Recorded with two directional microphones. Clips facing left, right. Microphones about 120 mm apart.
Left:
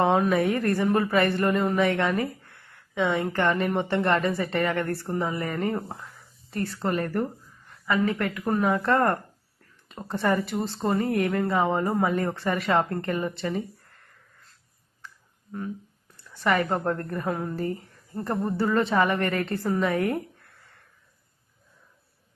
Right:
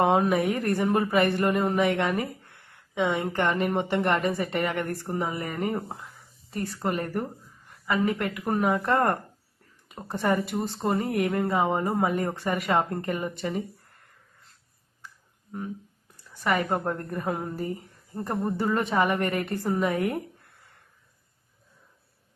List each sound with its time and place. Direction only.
0.0 s speech: 20° right (ahead or behind)
16.1 s a sound: 10° right (ahead or behind)
16.8 s speech: 15° right (ahead or behind)
19.9 s speech: 25° right (ahead or behind)